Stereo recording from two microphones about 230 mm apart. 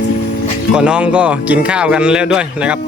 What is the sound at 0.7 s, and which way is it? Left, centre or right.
Speech, centre.